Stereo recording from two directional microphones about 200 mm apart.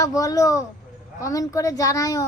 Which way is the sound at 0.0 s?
15° left (ahead or behind).